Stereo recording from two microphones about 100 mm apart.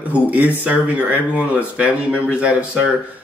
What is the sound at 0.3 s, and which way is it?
Speech, 15° right (ahead or behind).